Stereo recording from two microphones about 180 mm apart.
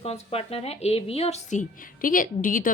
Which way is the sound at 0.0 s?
35° left (ahead or behind).